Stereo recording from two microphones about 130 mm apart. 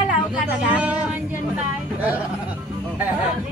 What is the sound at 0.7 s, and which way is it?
Speech, 10° right (ahead or behind).